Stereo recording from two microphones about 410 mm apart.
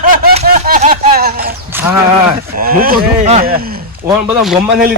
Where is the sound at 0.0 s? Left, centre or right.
Right.